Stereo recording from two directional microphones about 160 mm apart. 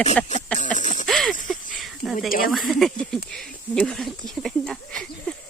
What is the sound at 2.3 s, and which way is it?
Speech, 65° left (ahead or behind).